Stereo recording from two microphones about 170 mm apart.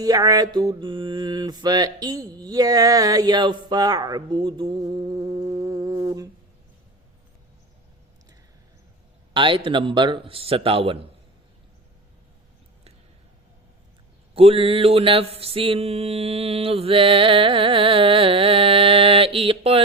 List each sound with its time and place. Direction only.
0.0 s mantra: 20° right (ahead or behind)
9.3 s mantra: 30° right (ahead or behind)
14.3 s mantra: 35° right (ahead or behind)